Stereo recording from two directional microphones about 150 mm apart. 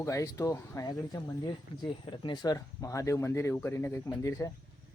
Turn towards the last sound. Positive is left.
turn(degrees=20)  # may be behind; listen again after turning